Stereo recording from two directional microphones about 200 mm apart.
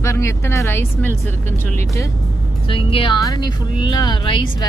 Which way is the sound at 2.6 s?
25° left (ahead or behind).